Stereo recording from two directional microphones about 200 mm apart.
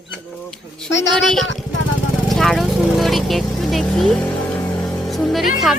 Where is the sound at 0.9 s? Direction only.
65° left (ahead or behind).